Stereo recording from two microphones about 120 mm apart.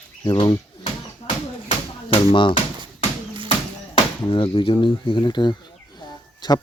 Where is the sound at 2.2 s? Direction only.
45° left (ahead or behind).